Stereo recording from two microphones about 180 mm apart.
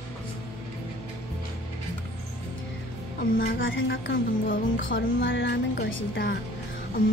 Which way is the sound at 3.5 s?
90° left.